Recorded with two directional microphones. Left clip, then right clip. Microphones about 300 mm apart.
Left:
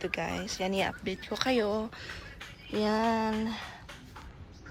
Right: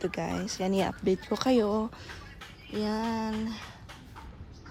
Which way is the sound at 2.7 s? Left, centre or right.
Centre.